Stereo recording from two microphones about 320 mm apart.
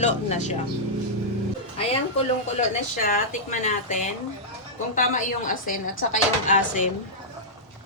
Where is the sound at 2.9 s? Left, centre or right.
Left.